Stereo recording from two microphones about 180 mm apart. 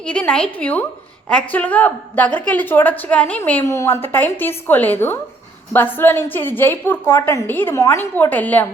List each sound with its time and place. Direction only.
0.0 s a woman's voice: 10° left (ahead or behind)